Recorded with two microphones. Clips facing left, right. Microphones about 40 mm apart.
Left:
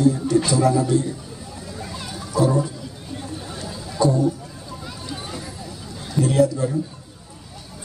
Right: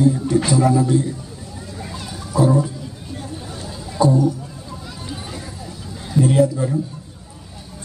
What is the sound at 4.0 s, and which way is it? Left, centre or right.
Speech, centre.